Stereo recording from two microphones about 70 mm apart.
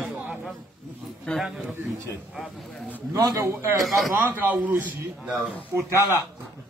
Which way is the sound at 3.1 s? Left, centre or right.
Right.